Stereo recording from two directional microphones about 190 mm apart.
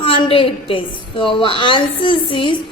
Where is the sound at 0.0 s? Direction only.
30° left (ahead or behind).